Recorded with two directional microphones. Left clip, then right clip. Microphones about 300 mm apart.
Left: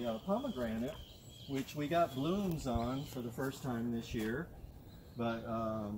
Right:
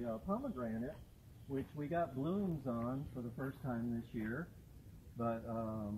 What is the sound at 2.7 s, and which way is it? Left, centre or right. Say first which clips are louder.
Speech: left 4 dB; centre.